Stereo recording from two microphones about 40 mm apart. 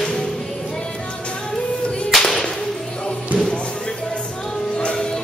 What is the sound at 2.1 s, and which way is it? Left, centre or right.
Whip, centre.